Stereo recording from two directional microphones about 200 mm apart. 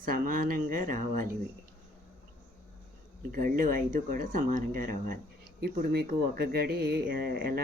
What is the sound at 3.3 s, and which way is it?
Speech, 45° right (ahead or behind).